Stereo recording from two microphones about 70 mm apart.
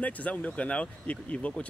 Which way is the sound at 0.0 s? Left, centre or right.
Left.